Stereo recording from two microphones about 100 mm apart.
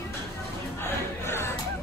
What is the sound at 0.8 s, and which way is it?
Music, 25° left (ahead or behind).